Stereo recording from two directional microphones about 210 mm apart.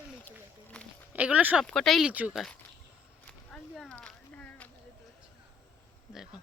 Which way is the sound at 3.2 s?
5° left (ahead or behind).